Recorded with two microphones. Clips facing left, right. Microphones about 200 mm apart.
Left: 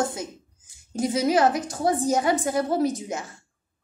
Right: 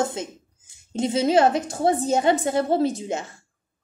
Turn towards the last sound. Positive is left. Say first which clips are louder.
# right 1 dB
turn(degrees=-25)  # may be behind; listen again after turning